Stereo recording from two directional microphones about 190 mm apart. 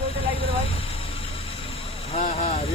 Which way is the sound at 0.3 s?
30° left (ahead or behind).